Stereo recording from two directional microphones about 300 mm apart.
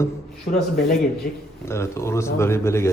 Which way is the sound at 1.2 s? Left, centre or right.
Left.